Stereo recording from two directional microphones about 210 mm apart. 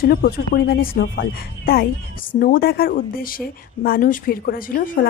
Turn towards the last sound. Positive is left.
turn(degrees=45)  # may be behind; listen again after turning